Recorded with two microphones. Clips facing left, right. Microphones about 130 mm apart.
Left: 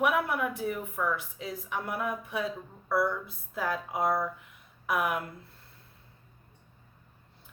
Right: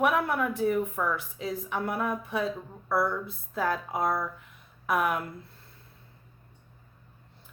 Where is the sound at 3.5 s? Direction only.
5° left (ahead or behind).